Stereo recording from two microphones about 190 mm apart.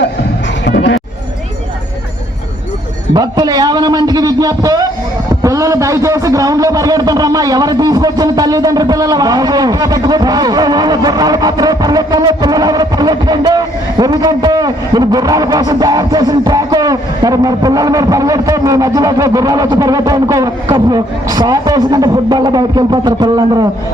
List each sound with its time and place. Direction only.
0.6 s music: 65° left (ahead or behind)
3.2 s a man's voice: 20° right (ahead or behind)